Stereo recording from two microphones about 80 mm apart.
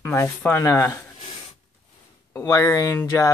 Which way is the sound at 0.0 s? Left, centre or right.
Left.